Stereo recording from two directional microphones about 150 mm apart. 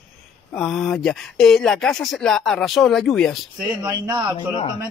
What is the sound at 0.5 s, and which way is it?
Speech, centre (ahead or behind).